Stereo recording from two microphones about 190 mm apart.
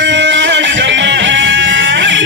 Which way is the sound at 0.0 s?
70° right (ahead or behind).